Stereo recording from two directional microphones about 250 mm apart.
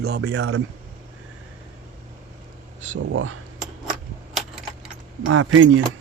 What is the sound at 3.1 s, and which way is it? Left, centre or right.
Speech, right.